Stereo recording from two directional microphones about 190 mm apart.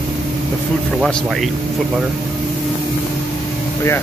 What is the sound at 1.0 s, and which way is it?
Speech, centre (ahead or behind).